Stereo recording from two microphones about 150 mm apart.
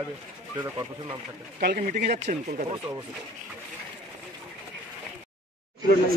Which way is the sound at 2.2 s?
50° right (ahead or behind).